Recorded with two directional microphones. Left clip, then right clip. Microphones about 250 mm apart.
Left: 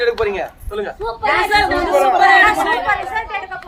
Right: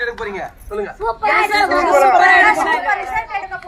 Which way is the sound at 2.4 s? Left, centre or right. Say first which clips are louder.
Even; centre.